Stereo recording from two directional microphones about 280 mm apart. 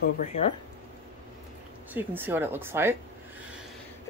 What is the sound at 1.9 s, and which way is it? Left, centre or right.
Speech, centre.